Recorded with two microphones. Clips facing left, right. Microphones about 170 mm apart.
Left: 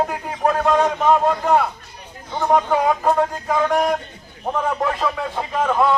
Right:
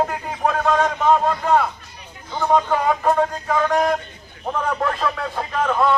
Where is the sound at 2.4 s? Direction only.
15° left (ahead or behind).